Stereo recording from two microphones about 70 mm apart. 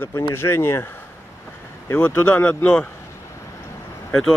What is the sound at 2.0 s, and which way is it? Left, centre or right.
Speech, left.